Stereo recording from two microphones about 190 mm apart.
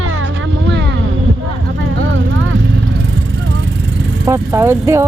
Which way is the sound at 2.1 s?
90° right.